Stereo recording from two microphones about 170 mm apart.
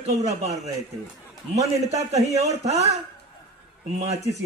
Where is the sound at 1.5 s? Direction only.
40° right (ahead or behind).